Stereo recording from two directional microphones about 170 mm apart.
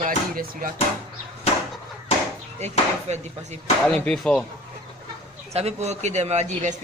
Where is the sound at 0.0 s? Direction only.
55° right (ahead or behind).